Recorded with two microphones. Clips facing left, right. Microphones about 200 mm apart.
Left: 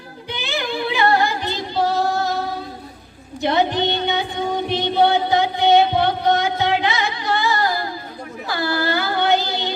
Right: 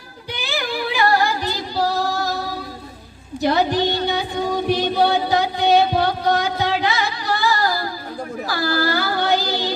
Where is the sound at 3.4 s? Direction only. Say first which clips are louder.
Even; 25° left (ahead or behind).